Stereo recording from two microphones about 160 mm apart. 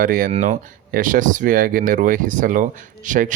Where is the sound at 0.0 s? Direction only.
60° right (ahead or behind).